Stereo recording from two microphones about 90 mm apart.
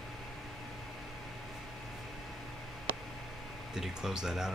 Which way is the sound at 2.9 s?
25° right (ahead or behind).